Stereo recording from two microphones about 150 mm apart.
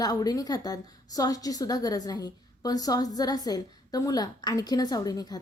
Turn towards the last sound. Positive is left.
turn(degrees=25)  # may be behind; listen again after turning